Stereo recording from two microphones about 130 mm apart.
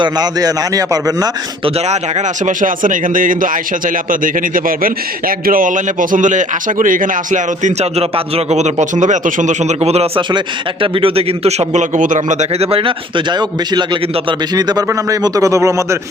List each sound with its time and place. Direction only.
0.0 s a man's voice: 30° right (ahead or behind)
1.6 s speech: 60° right (ahead or behind)
10.3 s a man's voice: 45° right (ahead or behind); by 16.0 s 25° right (ahead or behind)